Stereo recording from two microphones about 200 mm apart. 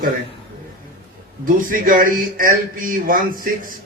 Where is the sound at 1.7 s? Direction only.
45° right (ahead or behind).